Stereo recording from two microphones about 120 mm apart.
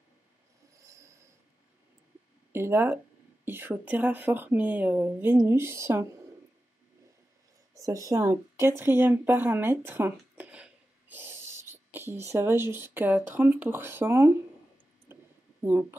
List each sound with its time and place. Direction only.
0.7 s a sound: 25° right (ahead or behind)
2.5 s speech: 20° right (ahead or behind)
7.7 s speech: 25° right (ahead or behind)
15.6 s speech: 20° right (ahead or behind)